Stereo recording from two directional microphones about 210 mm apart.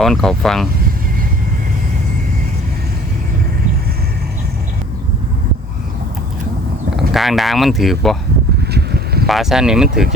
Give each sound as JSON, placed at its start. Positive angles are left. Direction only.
{"t": 0.0, "sound": "speech", "side_deg": 0}
{"t": 7.1, "sound": "speech", "side_deg": 0}
{"t": 8.7, "sound": "a sound", "side_deg": -50}
{"t": 9.2, "sound": "speech", "side_deg": 0}